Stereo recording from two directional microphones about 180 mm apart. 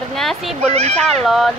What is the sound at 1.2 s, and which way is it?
Speech, centre (ahead or behind).